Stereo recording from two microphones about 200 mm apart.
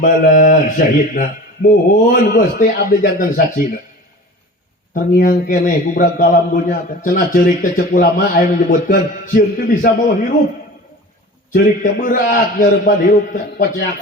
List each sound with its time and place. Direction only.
0.0 s a man's voice: 45° left (ahead or behind)
4.9 s a man's voice: 45° left (ahead or behind)
11.5 s a man's voice: 45° left (ahead or behind)